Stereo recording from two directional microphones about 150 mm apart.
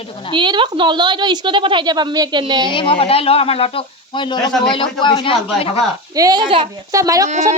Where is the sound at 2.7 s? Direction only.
35° left (ahead or behind).